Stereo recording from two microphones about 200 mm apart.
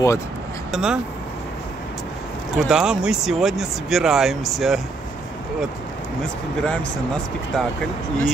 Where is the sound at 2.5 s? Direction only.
5° right (ahead or behind).